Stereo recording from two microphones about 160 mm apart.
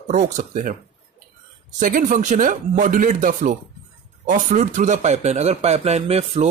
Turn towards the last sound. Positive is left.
turn(degrees=-40)  # may be behind; listen again after turning